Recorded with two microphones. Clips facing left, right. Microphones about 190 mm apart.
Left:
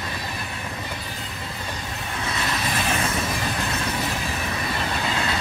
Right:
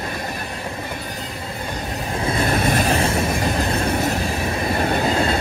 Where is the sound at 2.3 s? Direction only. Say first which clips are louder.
Right 8 dB; 50° right (ahead or behind).